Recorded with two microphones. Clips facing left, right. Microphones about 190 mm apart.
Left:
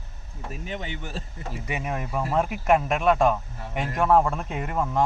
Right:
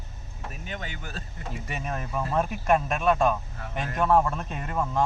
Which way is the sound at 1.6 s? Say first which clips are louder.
Left 4 dB; 15° left (ahead or behind).